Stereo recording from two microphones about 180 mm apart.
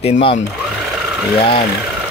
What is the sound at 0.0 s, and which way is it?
Speech, 30° left (ahead or behind).